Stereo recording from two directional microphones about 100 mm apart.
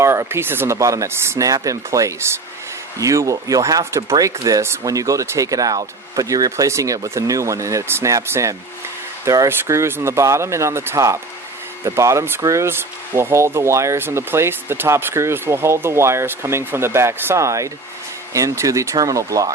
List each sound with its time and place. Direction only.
0.0 s speech: 30° right (ahead or behind)